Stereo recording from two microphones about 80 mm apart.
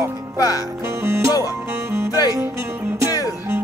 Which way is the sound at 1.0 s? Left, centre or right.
Right.